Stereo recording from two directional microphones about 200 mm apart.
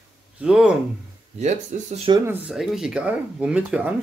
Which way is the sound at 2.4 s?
Centre (ahead or behind).